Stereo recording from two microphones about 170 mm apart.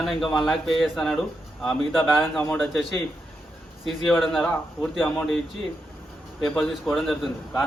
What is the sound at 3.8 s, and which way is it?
A man's voice, centre (ahead or behind).